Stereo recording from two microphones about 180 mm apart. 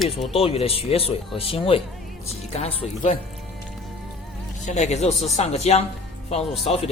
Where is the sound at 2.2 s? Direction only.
35° left (ahead or behind).